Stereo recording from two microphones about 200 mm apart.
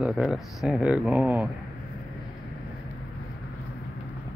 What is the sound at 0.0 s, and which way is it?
Speech, centre (ahead or behind).